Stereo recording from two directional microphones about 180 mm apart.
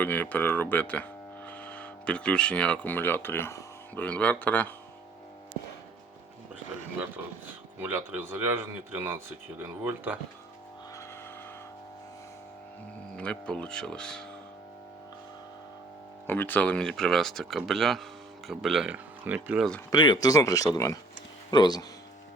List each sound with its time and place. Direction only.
0.0 s speech: 10° left (ahead or behind)
7.8 s speech: 10° right (ahead or behind)
13.1 s speech: 5° left (ahead or behind)
16.2 s speech: 10° left (ahead or behind); by 19.6 s 10° right (ahead or behind)
19.9 s speech: 20° left (ahead or behind)